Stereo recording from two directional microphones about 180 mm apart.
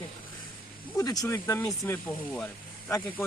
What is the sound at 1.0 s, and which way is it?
Speech, 20° left (ahead or behind).